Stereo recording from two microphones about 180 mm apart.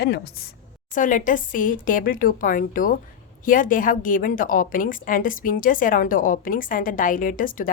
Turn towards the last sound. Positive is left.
turn(degrees=50)  # may be behind; listen again after turning